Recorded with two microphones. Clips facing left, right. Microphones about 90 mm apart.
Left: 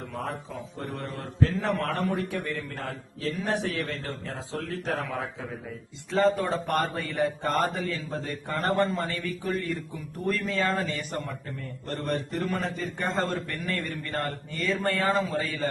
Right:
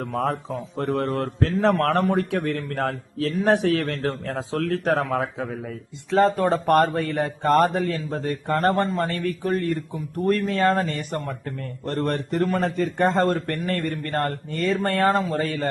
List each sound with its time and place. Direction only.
0.1 s a man's voice: 75° right (ahead or behind)